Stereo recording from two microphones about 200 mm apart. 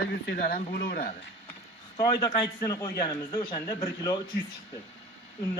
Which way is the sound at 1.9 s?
20° left (ahead or behind).